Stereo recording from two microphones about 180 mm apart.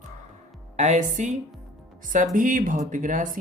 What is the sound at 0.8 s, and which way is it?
Speech, 40° right (ahead or behind).